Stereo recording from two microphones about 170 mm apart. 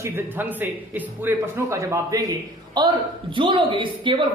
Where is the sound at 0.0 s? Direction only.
10° right (ahead or behind).